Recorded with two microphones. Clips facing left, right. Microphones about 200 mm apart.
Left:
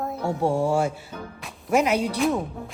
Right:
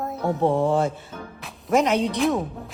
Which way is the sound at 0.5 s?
20° right (ahead or behind).